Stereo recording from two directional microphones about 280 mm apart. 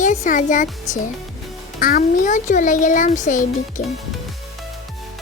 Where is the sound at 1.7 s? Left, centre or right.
Left.